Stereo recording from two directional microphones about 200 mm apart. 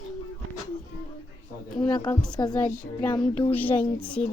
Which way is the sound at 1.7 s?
20° left (ahead or behind).